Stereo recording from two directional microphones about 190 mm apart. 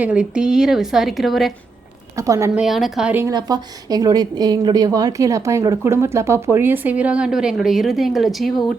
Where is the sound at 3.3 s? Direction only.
20° right (ahead or behind).